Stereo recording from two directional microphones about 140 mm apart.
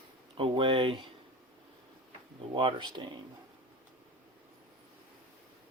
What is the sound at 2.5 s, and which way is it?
Speech, 35° right (ahead or behind).